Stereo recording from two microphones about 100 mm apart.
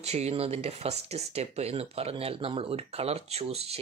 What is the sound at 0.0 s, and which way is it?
Speech, 90° right.